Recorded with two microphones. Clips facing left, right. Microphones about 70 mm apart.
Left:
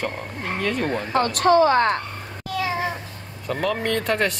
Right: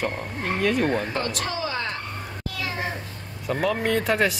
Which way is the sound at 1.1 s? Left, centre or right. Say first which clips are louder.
Left 11 dB; left.